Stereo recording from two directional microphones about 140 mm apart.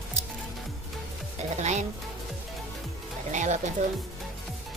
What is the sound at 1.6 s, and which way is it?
Speech, 55° right (ahead or behind).